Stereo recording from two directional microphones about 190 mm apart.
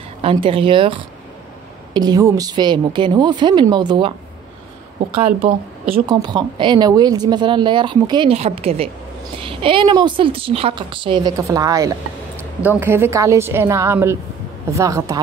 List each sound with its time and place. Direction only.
0.2 s speech: 30° right (ahead or behind)
6.0 s a woman's voice: 20° right (ahead or behind)